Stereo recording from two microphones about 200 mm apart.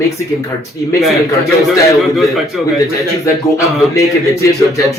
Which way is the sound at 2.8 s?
15° left (ahead or behind).